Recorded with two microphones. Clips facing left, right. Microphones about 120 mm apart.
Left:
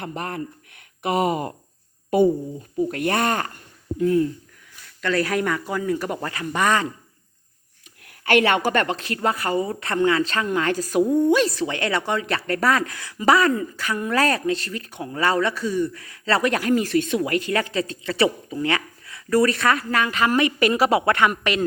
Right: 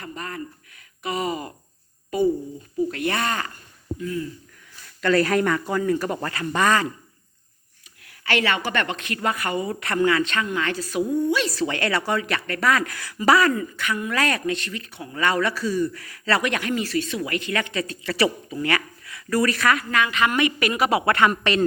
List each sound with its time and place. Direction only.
0.0 s speech: 65° left (ahead or behind)
2.9 s speech: 50° left (ahead or behind)
3.9 s speech: 65° left (ahead or behind)
4.9 s speech: centre (ahead or behind); by 6.8 s 15° left (ahead or behind)
8.2 s a man's voice: 50° left (ahead or behind)
11.4 s a man's voice: 20° left (ahead or behind); by 12.8 s 35° left (ahead or behind)
12.8 s a man's voice: 20° left (ahead or behind); by 15.1 s 45° left (ahead or behind)
15.1 s a man's voice: 30° left (ahead or behind); by 21.6 s 10° left (ahead or behind)